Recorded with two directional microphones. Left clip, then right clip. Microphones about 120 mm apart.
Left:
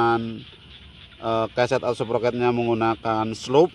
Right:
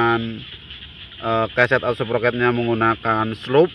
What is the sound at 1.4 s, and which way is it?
Speech, 5° left (ahead or behind).